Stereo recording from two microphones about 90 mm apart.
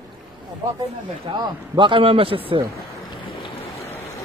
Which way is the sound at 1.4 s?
65° right (ahead or behind).